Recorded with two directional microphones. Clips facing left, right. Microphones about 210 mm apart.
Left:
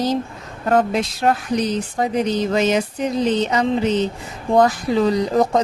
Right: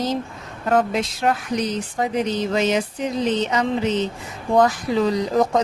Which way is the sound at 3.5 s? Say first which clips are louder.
Left 3 dB; 35° left (ahead or behind).